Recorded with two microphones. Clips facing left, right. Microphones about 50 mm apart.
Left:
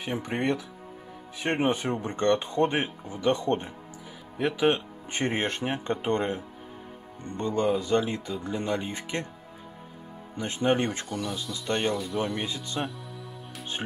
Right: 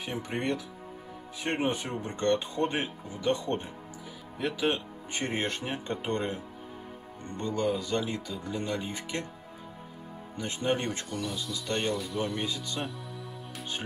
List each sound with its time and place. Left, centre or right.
0.0 s speech: left
7.3 s speech: left
10.6 s speech: left
11.1 s speech: centre